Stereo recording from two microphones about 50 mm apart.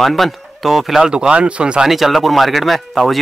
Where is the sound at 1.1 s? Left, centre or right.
Centre.